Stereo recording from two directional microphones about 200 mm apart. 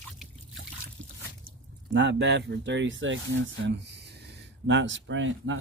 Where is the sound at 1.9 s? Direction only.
65° right (ahead or behind).